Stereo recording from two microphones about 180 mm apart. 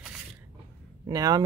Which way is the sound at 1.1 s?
20° right (ahead or behind).